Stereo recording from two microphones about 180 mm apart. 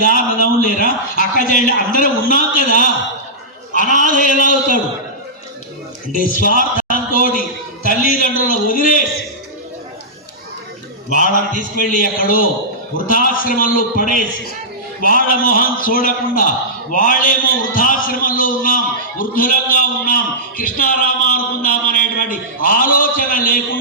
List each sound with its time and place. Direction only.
0.0 s a man's voice: 50° left (ahead or behind)
6.1 s a man's voice: 50° left (ahead or behind)
11.1 s a man's voice: 45° left (ahead or behind)